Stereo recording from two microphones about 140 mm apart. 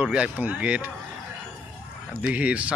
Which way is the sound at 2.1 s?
10° right (ahead or behind).